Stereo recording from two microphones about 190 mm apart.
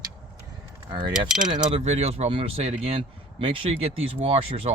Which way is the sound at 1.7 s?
35° right (ahead or behind).